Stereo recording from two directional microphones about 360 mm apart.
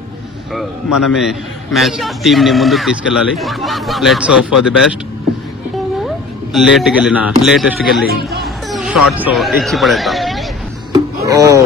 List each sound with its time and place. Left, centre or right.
0.9 s a man's voice: centre
6.0 s speech: centre
8.1 s speech: right
8.6 s a sound: centre
9.2 s speech: centre
10.9 s a sound: centre